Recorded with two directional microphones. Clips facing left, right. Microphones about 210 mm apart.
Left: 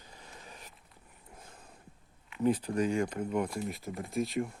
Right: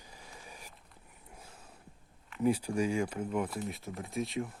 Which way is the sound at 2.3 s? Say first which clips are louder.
Left 1 dB; 10° right (ahead or behind).